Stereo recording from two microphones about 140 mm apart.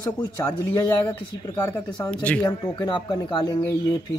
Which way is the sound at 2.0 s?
10° left (ahead or behind).